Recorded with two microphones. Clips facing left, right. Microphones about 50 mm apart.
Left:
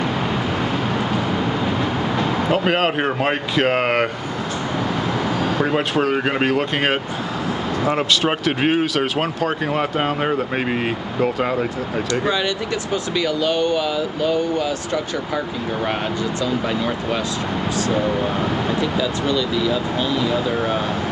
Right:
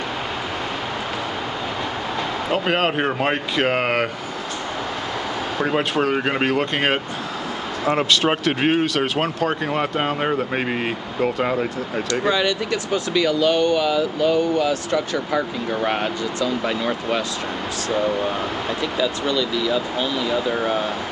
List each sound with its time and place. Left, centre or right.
2.5 s speech: centre
5.6 s speech: centre
12.1 s speech: left
14.2 s speech: right
17.9 s speech: centre
18.9 s speech: left
20.2 s speech: centre